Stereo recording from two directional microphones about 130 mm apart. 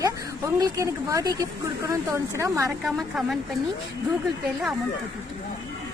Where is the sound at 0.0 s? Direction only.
25° right (ahead or behind).